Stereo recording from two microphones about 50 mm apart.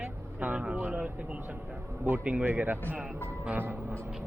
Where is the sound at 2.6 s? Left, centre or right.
Right.